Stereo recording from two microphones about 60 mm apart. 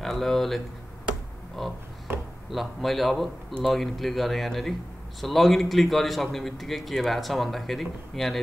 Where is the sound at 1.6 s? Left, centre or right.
Centre.